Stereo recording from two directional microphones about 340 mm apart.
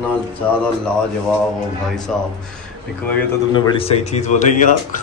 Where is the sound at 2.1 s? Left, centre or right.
Centre.